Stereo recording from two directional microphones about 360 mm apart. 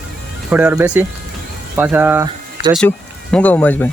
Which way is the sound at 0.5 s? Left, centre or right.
Centre.